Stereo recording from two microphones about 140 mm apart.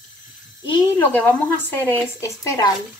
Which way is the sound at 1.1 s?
15° left (ahead or behind).